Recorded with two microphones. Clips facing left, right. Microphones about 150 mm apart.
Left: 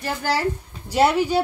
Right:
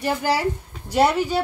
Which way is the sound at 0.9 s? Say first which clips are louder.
Even; 5° left (ahead or behind).